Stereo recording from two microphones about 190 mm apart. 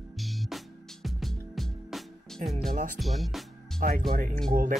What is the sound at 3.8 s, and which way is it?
Speech, 50° right (ahead or behind).